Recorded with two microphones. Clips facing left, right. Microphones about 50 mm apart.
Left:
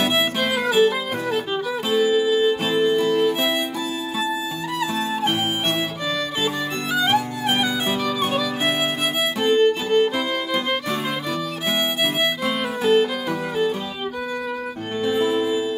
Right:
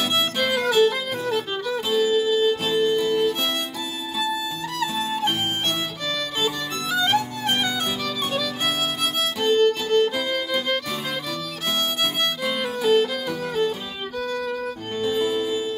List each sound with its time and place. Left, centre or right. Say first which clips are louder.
0.1 s music: left 1 dB; centre
6.4 s music: left 2 dB; centre
12.0 s music: left 3 dB; centre
15.0 s music: left 3 dB; left